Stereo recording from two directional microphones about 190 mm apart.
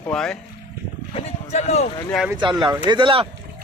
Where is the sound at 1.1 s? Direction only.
35° left (ahead or behind).